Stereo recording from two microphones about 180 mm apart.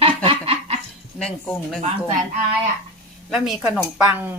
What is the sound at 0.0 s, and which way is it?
Snicker, 30° right (ahead or behind).